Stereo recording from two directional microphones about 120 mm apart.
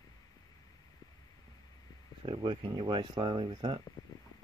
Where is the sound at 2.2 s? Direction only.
40° right (ahead or behind).